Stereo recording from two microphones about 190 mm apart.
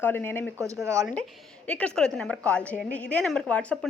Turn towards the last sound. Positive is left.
turn(degrees=5)  # may be behind; listen again after turning